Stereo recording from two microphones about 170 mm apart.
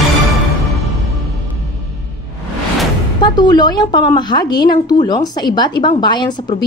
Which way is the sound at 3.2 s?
25° left (ahead or behind).